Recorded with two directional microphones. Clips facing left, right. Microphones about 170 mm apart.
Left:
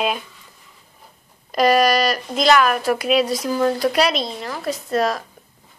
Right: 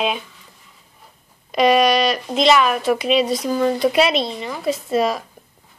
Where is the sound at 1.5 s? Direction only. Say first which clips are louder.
Right 1 dB; centre (ahead or behind).